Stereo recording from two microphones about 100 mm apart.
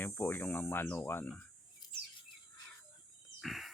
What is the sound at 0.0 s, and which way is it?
Speech, 20° left (ahead or behind).